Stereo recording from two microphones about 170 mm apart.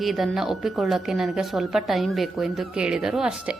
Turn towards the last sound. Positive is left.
turn(degrees=-5)  # may be behind; listen again after turning